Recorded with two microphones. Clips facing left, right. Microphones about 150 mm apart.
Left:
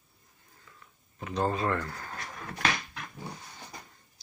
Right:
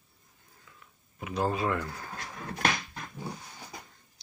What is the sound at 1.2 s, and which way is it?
Speech, 5° right (ahead or behind).